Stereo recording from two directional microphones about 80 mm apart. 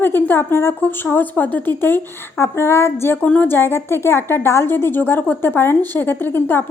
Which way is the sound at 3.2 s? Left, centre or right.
Centre.